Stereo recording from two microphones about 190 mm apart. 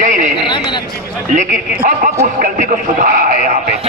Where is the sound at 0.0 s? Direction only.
45° right (ahead or behind).